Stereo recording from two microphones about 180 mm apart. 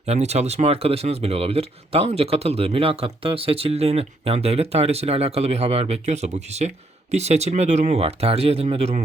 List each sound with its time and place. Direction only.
0.0 s speech: 35° right (ahead or behind)